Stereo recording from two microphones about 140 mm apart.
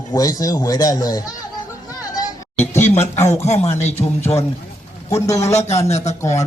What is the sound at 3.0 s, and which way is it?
Speech, 20° left (ahead or behind).